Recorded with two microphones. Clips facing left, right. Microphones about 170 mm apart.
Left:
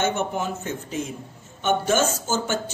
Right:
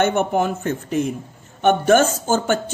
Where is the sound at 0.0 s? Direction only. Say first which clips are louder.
Right 6 dB; 60° right (ahead or behind).